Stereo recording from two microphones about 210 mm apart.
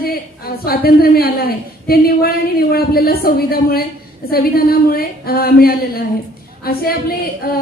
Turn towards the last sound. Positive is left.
turn(degrees=45)  # may be behind; listen again after turning